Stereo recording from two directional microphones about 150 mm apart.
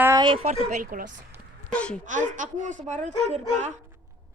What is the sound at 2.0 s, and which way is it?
A woman's voice, 55° right (ahead or behind).